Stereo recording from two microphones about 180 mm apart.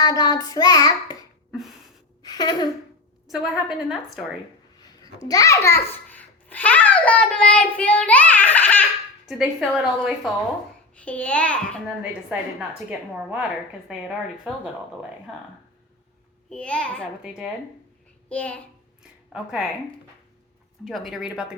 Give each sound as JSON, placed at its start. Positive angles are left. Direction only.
{"t": 0.0, "sound": "child singing", "side_deg": 20}
{"t": 1.5, "sound": "a sound", "side_deg": 0}
{"t": 2.2, "sound": "a sound", "side_deg": 20}
{"t": 3.2, "sound": "a woman's voice", "side_deg": 0}
{"t": 5.3, "sound": "a child's voice", "side_deg": 20}
{"t": 9.2, "sound": "a woman's voice", "side_deg": -5}
{"t": 12.3, "sound": "a woman's voice", "side_deg": -10}
{"t": 16.5, "sound": "a child's voice", "side_deg": 5}
{"t": 17.2, "sound": "a woman's voice", "side_deg": -5}
{"t": 18.3, "sound": "a child's voice", "side_deg": 5}
{"t": 19.3, "sound": "a woman's voice", "side_deg": -5}
{"t": 20.8, "sound": "a woman's voice", "side_deg": 0}